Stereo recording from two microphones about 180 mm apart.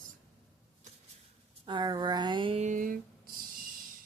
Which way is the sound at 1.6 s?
25° right (ahead or behind).